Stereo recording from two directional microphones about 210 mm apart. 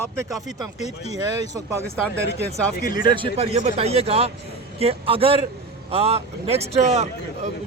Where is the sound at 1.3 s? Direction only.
15° right (ahead or behind).